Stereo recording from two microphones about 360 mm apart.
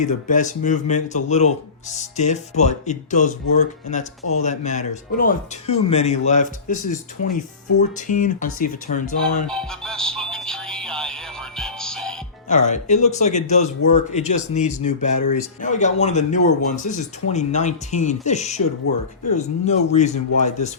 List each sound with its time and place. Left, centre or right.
0.0 s a man's voice: left
9.5 s music: centre
12.5 s a man's voice: centre
15.1 s speech: left
15.6 s a man's voice: centre